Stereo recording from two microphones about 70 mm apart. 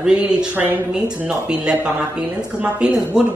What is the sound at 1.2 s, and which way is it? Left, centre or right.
Speech, centre.